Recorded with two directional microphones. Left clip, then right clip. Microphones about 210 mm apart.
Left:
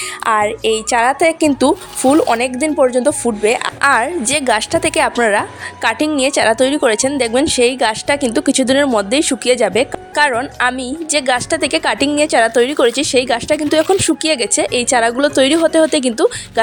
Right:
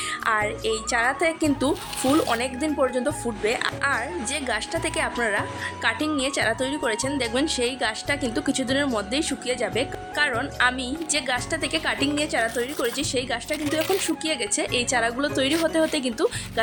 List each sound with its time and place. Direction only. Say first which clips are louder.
0.3 s speech: left 10 dB; 40° left (ahead or behind)